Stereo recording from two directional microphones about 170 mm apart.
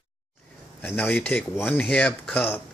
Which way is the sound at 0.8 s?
10° left (ahead or behind).